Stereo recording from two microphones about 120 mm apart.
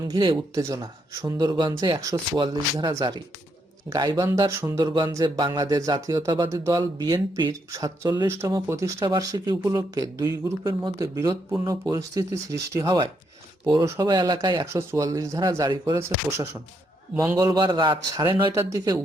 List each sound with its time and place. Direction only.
0.1 s speech: 40° right (ahead or behind)
0.5 s speech: 25° right (ahead or behind)
2.4 s speech: 35° right (ahead or behind)
7.7 s speech: 25° right (ahead or behind)
14.1 s speech: 35° right (ahead or behind)
14.7 s speech: 25° right (ahead or behind)